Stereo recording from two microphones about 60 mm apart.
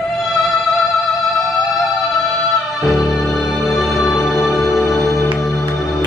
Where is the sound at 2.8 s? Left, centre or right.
Centre.